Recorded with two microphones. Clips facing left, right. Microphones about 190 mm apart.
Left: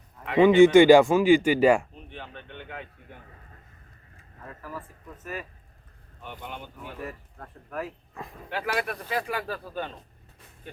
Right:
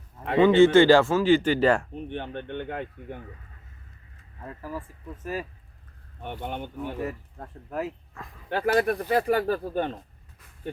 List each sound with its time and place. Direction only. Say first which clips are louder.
0.3 s speech: left 1 dB; 10° left (ahead or behind)
2.0 s speech: right 9 dB; 60° right (ahead or behind)
5.2 s speech: right 5 dB; 30° right (ahead or behind)
6.2 s speech: right 6 dB; 55° right (ahead or behind)
7.0 s speech: right 5 dB; 25° right (ahead or behind)
8.5 s speech: right 7 dB; 45° right (ahead or behind)